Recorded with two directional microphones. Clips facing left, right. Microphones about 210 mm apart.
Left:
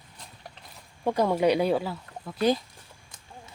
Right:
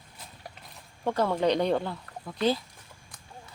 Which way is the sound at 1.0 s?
10° left (ahead or behind).